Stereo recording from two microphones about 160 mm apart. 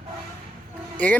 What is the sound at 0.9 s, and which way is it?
Speech, 10° left (ahead or behind).